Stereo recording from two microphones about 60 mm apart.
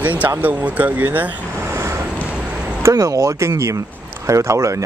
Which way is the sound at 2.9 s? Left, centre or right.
Right.